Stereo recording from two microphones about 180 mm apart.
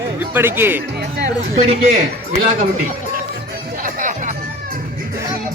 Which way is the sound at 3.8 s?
45° right (ahead or behind).